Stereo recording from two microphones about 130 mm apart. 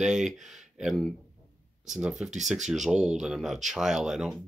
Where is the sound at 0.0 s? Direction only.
5° right (ahead or behind).